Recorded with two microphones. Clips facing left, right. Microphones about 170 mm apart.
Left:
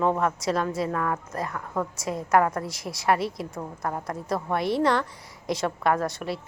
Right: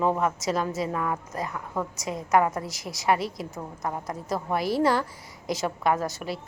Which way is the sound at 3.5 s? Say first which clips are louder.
Left 1 dB; 20° right (ahead or behind).